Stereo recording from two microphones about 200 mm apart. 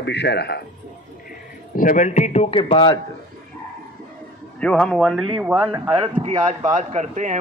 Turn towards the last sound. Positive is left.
turn(degrees=-35)  # may be behind; listen again after turning